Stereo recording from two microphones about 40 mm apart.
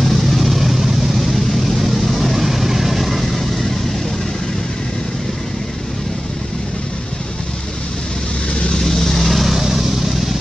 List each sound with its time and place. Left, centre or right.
0.0 s vehicle: centre
8.5 s vehicle: left
8.8 s vehicle: centre
9.3 s vehicle: centre
9.6 s vehicle: centre